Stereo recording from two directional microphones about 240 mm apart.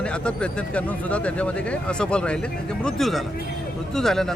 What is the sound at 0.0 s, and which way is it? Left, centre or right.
Speech, centre.